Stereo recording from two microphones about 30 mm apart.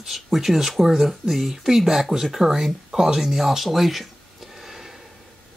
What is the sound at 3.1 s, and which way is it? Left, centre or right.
Speech, centre.